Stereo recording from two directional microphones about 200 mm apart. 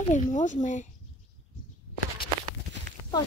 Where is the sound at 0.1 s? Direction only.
35° left (ahead or behind).